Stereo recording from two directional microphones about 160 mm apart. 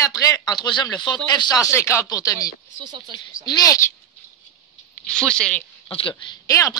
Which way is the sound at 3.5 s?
25° left (ahead or behind).